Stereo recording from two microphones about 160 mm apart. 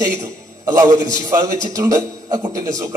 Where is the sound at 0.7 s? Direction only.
25° right (ahead or behind).